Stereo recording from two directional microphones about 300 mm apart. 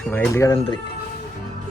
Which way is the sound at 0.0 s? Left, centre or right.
Centre.